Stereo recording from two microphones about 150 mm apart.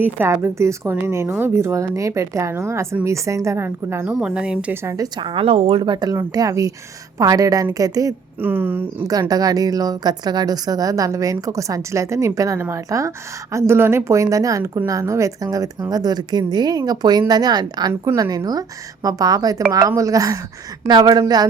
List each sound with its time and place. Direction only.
0.0 s a woman's voice: 15° right (ahead or behind)
4.1 s a woman's voice: 5° right (ahead or behind); by 8.1 s 25° right (ahead or behind)
8.4 s speech: 15° right (ahead or behind)
9.3 s a woman's voice: 25° right (ahead or behind)